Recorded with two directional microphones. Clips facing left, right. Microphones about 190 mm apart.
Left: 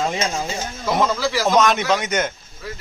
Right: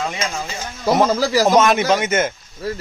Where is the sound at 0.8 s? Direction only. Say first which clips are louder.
Right 4 dB; 40° right (ahead or behind).